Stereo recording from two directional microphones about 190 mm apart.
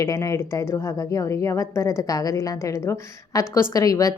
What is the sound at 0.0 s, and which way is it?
A woman's voice, 15° left (ahead or behind).